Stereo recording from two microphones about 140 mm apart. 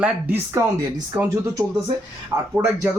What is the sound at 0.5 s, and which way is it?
Speech, 20° right (ahead or behind).